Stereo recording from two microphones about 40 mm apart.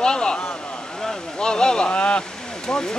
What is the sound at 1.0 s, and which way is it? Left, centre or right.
Vehicle, centre.